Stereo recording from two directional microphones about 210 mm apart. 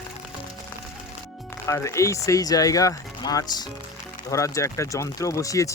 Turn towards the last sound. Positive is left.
turn(degrees=15)  # may be behind; listen again after turning